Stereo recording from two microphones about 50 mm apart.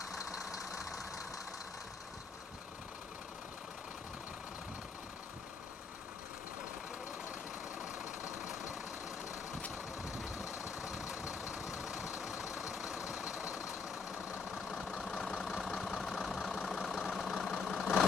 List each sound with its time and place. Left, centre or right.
0.0 s vehicle: centre
7.8 s vehicle: centre
10.5 s vehicle: left
10.8 s vehicle: centre
14.5 s vehicle: centre